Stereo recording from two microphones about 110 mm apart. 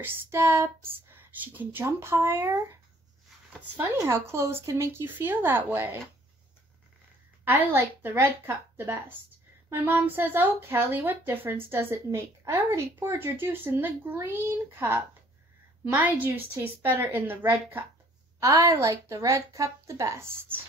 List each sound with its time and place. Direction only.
0.0 s a woman's voice: 20° right (ahead or behind)
7.4 s a woman's voice: 20° right (ahead or behind)
18.4 s a woman's voice: 30° right (ahead or behind)